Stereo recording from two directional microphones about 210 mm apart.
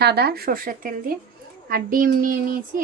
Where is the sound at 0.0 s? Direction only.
50° right (ahead or behind).